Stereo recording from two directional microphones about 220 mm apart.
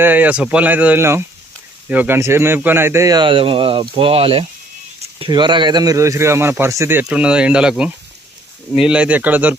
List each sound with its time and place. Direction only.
0.0 s speech: 10° right (ahead or behind)